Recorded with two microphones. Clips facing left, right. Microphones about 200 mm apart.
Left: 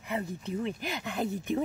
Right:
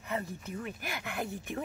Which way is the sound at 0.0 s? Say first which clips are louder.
Left 3 dB; 15° left (ahead or behind).